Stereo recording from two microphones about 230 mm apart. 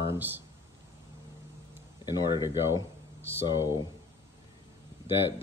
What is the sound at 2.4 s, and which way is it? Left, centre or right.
Speech, centre.